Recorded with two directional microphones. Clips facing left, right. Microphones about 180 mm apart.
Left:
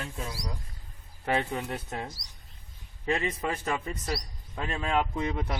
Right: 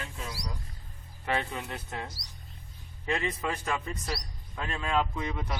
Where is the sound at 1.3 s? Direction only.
40° left (ahead or behind).